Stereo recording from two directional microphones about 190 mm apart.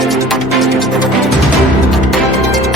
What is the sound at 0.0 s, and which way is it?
Music, centre (ahead or behind).